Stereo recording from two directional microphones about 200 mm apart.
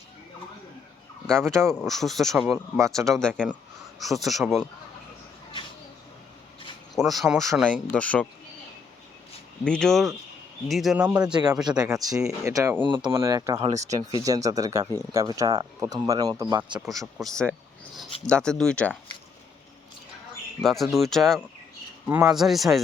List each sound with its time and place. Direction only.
1.3 s speech: 5° left (ahead or behind)
2.7 s speech: 15° right (ahead or behind)
3.0 s speech: centre (ahead or behind)
6.9 s speech: centre (ahead or behind)
9.6 s speech: 5° left (ahead or behind)
11.8 s speech: 20° right (ahead or behind)
13.6 s speech: 30° right (ahead or behind)
14.3 s speech: 15° right (ahead or behind)
16.8 s speech: centre (ahead or behind)
20.6 s speech: centre (ahead or behind)